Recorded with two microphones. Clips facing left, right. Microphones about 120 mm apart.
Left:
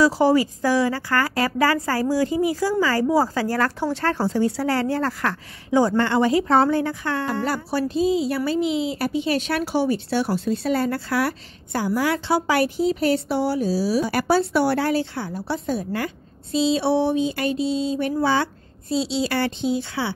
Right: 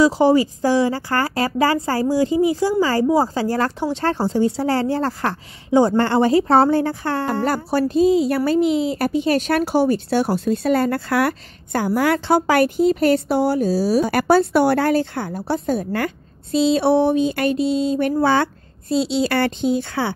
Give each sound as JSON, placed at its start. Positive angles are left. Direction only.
{"t": 0.0, "sound": "a woman's voice", "side_deg": -20}